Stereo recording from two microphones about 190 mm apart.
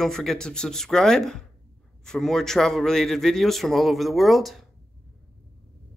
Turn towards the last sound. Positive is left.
turn(degrees=0)  # may be behind; listen again after turning